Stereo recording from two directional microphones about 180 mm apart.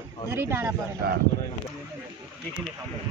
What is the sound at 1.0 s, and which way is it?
Speech, 60° right (ahead or behind).